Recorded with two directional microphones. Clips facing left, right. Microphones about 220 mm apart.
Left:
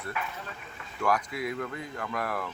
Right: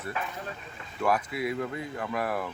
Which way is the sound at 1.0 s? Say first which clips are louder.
Right 1 dB; 25° right (ahead or behind).